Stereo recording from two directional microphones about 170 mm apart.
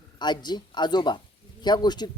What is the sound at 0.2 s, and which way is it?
Speech, 25° left (ahead or behind).